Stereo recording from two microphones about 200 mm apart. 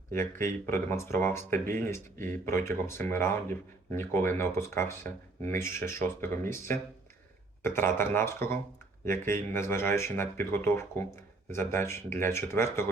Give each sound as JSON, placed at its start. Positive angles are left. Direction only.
{"t": 0.6, "sound": "speech", "side_deg": 10}